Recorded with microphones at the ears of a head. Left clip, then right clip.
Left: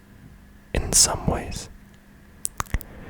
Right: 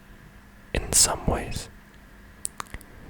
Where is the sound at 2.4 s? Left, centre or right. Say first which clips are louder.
Left 6 dB; left.